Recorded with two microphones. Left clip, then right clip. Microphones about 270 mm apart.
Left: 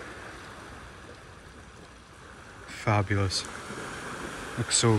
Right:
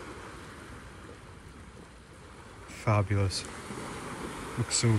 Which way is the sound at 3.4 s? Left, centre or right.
Centre.